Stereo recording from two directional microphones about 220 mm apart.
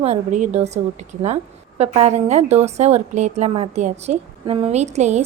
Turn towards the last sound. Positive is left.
turn(degrees=-30)  # may be behind; listen again after turning